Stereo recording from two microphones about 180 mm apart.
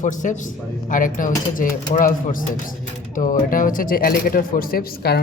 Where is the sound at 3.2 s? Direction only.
50° left (ahead or behind).